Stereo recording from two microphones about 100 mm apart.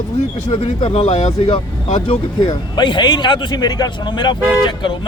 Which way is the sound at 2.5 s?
50° left (ahead or behind).